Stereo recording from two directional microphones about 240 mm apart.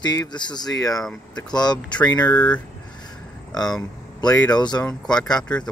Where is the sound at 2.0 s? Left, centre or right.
Centre.